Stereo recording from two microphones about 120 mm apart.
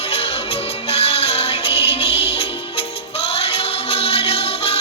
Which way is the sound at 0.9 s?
55° left (ahead or behind).